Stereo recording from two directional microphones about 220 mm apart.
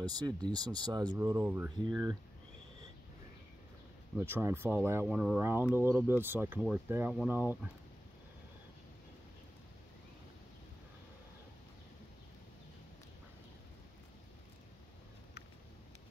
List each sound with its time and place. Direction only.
0.0 s speech: 20° right (ahead or behind)
4.2 s speech: 10° right (ahead or behind)